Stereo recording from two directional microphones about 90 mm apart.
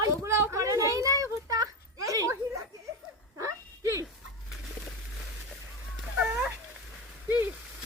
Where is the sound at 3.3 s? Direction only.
35° right (ahead or behind).